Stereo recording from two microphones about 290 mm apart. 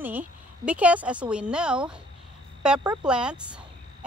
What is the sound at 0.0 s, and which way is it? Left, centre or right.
Speech, centre.